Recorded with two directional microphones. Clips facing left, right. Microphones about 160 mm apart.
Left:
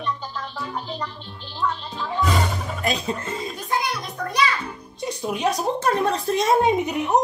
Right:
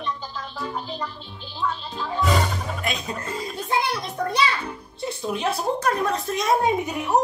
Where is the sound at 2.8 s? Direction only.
35° left (ahead or behind).